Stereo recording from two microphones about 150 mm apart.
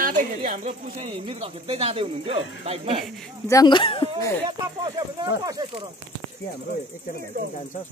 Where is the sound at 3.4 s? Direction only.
25° left (ahead or behind).